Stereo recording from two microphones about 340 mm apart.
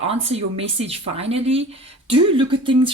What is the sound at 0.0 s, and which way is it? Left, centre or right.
Speech, centre.